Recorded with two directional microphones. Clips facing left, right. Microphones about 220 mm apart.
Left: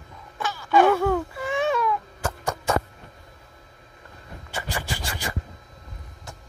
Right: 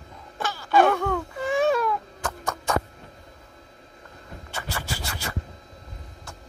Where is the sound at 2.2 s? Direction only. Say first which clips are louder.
Left 2 dB; 10° left (ahead or behind).